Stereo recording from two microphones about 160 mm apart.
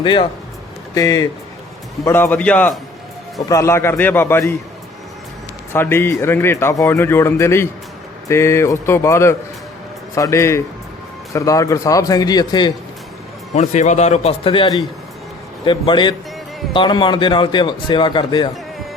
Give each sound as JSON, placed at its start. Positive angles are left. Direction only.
{"t": 0.0, "sound": "speech", "side_deg": 30}
{"t": 0.9, "sound": "speech", "side_deg": 20}
{"t": 5.7, "sound": "speech", "side_deg": 15}
{"t": 13.5, "sound": "a man's voice", "side_deg": 50}